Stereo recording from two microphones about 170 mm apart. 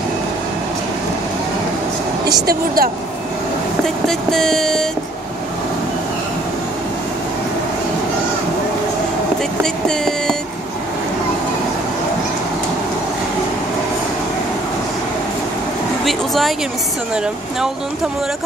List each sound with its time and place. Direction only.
2.4 s a woman's voice: 60° right (ahead or behind)
4.1 s vehicle: centre (ahead or behind)
9.6 s vehicle: 5° left (ahead or behind)
16.1 s a sound: centre (ahead or behind)